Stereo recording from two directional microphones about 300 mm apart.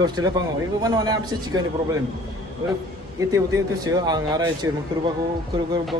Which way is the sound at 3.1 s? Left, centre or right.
Centre.